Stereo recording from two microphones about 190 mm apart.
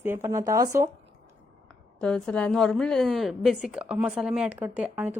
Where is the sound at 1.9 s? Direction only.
5° left (ahead or behind).